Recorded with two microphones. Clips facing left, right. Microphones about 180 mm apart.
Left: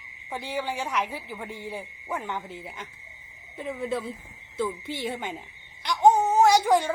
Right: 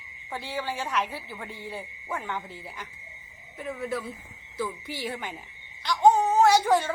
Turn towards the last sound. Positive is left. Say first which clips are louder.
# left 1 dB
turn(degrees=15)  # may be behind; listen again after turning